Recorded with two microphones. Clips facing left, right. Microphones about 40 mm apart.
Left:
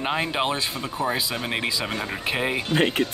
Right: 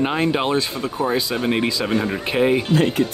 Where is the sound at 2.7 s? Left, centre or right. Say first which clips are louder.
Right 3 dB; left.